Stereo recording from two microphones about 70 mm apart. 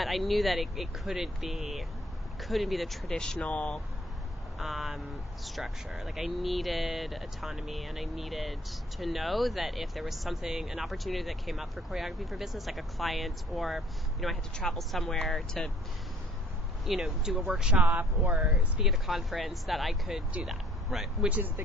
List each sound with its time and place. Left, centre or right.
0.0 s speech: centre
4.5 s speech: centre
16.8 s speech: centre
17.7 s speech: right
18.3 s speech: centre
21.2 s speech: right